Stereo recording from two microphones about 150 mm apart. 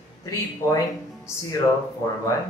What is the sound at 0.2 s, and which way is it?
Speech, 20° left (ahead or behind).